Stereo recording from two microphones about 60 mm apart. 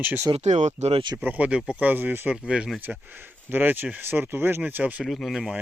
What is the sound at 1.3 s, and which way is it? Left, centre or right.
Speech, right.